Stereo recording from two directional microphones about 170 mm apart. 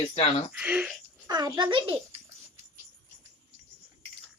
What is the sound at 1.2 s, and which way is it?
Speech, 20° right (ahead or behind).